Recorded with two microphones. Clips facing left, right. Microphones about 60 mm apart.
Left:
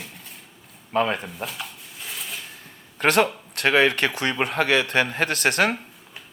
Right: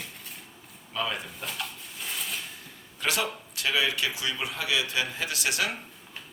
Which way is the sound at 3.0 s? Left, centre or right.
Left.